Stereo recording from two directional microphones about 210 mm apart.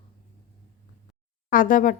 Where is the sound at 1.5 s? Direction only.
40° left (ahead or behind).